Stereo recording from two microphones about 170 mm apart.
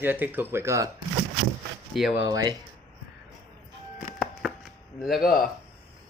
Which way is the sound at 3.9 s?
5° right (ahead or behind).